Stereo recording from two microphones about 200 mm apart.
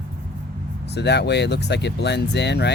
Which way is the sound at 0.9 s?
60° left (ahead or behind).